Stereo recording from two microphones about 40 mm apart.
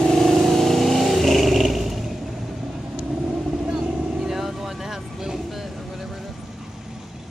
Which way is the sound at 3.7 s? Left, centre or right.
Centre.